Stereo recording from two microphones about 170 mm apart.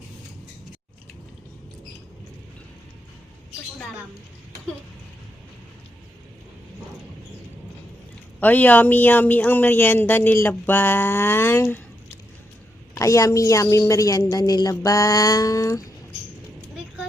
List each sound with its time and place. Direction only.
8.4 s speech: 10° left (ahead or behind)
12.9 s a woman's voice: 20° left (ahead or behind)